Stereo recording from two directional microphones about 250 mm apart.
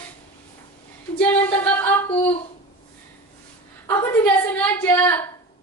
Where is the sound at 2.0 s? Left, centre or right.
Left.